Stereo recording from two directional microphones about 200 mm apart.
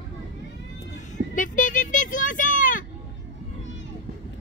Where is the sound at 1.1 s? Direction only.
40° left (ahead or behind).